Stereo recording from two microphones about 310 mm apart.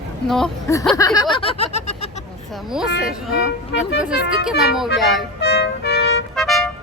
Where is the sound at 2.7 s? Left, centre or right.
Centre.